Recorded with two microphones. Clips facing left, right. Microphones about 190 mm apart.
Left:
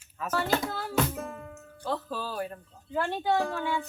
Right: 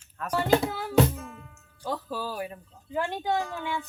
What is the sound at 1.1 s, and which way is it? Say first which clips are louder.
Music: left 4 dB; 55° left (ahead or behind).